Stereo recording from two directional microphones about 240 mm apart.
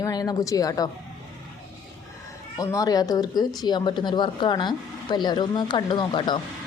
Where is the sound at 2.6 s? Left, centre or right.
Centre.